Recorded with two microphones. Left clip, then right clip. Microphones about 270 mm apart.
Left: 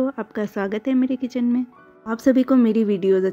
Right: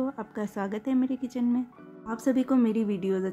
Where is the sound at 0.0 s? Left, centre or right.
Centre.